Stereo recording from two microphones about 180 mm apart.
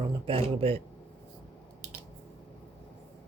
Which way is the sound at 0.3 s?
30° right (ahead or behind).